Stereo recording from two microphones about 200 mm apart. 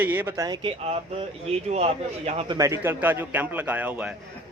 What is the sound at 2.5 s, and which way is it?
A man's voice, 15° right (ahead or behind).